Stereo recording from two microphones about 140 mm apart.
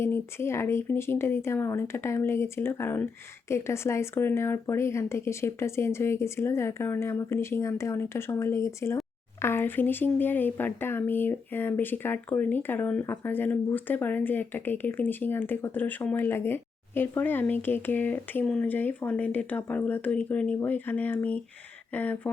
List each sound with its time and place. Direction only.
0.0 s speech: 20° left (ahead or behind)